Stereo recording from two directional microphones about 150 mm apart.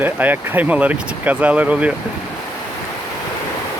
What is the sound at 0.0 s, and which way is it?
Speech, 10° right (ahead or behind).